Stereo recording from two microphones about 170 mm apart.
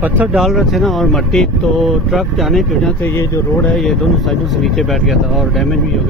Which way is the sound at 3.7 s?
Centre (ahead or behind).